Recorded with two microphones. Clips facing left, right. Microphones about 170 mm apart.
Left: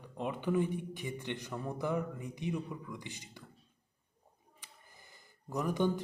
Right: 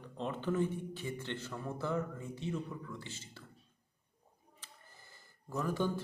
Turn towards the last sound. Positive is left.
turn(degrees=15)  # may be behind; listen again after turning